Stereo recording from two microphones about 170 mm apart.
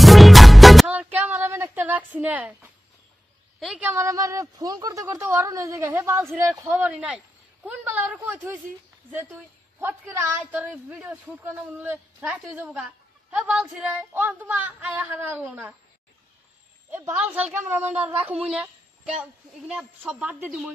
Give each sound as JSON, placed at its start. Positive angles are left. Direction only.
{"t": 0.0, "sound": "music", "side_deg": 0}
{"t": 3.5, "sound": "a woman's voice", "side_deg": -5}
{"t": 16.9, "sound": "a woman's voice", "side_deg": -10}